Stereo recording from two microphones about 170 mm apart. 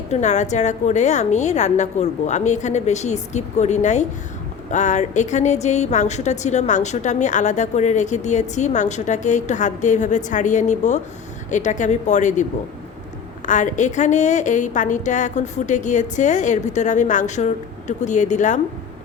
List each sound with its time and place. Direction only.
0.1 s speech: 45° left (ahead or behind)